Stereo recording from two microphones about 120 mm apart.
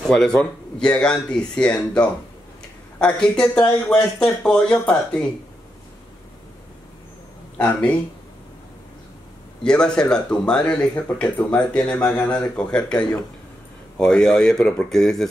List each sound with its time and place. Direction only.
0.1 s speech: 5° left (ahead or behind)
3.2 s speech: 5° left (ahead or behind)
7.5 s speech: 10° left (ahead or behind)
9.6 s a man's voice: 5° left (ahead or behind)